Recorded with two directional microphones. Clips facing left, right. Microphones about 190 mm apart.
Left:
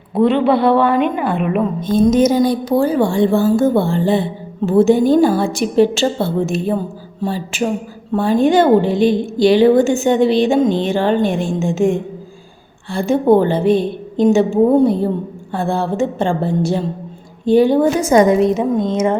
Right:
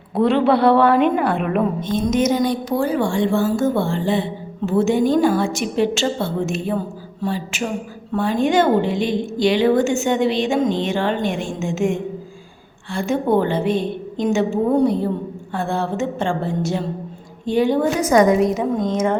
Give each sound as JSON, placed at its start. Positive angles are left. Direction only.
{"t": 0.1, "sound": "a woman's voice", "side_deg": 0}
{"t": 1.9, "sound": "a woman's voice", "side_deg": 35}